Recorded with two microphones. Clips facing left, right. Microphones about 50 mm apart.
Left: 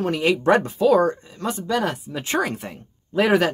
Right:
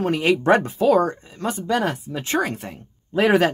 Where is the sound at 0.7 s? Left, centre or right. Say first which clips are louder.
Even; centre.